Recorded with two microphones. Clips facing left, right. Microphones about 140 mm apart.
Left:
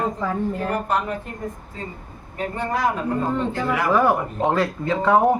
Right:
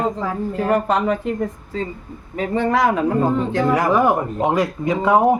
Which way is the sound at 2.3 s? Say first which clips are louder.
Right 6 dB; 90° right.